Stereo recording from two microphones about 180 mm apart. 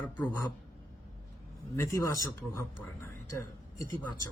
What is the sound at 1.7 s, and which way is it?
Speech, 15° left (ahead or behind).